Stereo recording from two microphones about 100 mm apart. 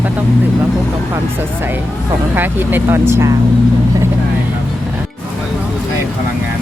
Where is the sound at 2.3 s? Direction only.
20° right (ahead or behind).